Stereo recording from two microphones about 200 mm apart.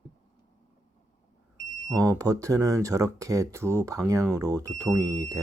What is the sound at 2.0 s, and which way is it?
Speech, 15° right (ahead or behind).